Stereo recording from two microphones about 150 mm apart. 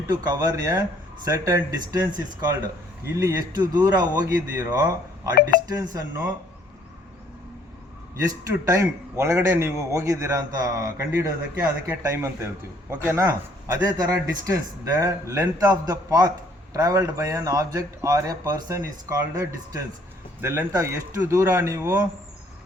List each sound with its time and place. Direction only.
0.1 s speech: 25° right (ahead or behind)
8.3 s speech: 20° right (ahead or behind)